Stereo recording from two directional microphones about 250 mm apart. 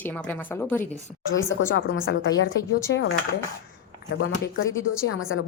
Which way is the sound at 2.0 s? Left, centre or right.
Left.